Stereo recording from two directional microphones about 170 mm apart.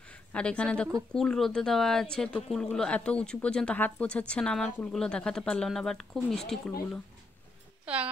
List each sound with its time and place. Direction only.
0.1 s speech: 5° left (ahead or behind)
7.8 s music: 10° right (ahead or behind)